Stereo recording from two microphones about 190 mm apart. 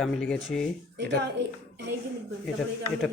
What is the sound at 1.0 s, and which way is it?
Speech, 65° right (ahead or behind).